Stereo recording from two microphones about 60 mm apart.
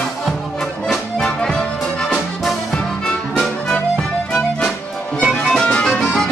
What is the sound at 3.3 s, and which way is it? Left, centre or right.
Music, centre.